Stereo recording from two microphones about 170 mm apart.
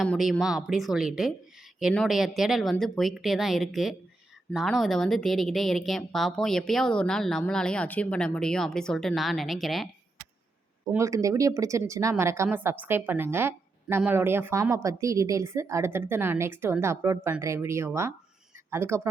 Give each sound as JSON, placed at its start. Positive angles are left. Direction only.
{"t": 0.0, "sound": "speech", "side_deg": 0}
{"t": 10.9, "sound": "speech", "side_deg": -20}